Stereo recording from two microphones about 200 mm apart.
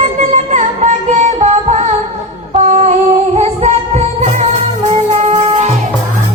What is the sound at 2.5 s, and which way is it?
Humming, 35° right (ahead or behind).